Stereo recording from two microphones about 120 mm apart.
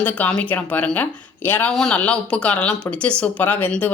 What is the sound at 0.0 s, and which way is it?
Speech, 10° left (ahead or behind).